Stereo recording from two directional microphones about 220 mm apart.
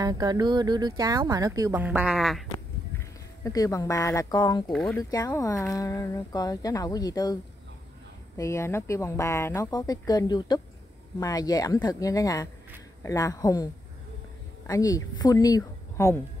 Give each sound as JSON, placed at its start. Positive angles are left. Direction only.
{"t": 0.0, "sound": "speech", "side_deg": -20}
{"t": 3.4, "sound": "speech", "side_deg": 15}
{"t": 8.4, "sound": "speech", "side_deg": 15}
{"t": 14.7, "sound": "a woman's voice", "side_deg": 15}